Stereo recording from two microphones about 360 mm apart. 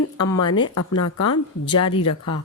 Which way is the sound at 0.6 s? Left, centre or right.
Left.